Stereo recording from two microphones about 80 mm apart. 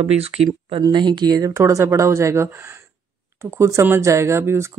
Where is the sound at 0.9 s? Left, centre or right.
Right.